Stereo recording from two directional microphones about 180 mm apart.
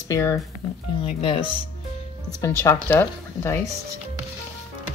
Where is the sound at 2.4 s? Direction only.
15° left (ahead or behind).